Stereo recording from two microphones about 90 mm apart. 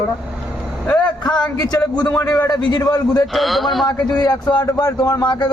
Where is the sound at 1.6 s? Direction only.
45° left (ahead or behind).